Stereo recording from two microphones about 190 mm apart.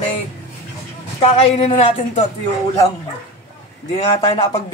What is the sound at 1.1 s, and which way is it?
Speech, 35° left (ahead or behind).